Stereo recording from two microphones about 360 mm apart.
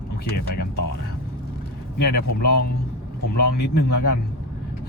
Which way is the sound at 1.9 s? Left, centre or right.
Left.